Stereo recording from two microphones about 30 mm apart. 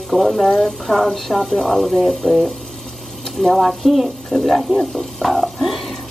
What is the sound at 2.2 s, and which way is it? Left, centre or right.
Speech, left.